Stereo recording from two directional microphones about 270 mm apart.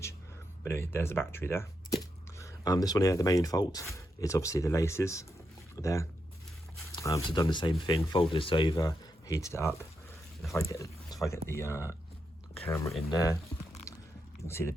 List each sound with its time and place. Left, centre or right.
0.7 s speech: centre
13.9 s a sound: centre
14.4 s speech: centre